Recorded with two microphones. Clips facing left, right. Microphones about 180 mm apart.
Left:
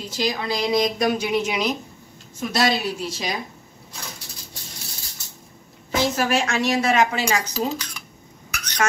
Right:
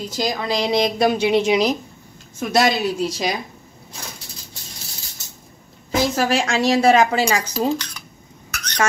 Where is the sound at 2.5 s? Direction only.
45° right (ahead or behind).